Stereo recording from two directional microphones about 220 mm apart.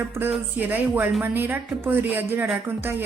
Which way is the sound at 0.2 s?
10° right (ahead or behind).